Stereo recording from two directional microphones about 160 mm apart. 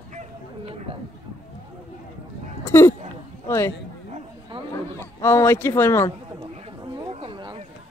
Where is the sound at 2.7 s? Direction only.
15° left (ahead or behind).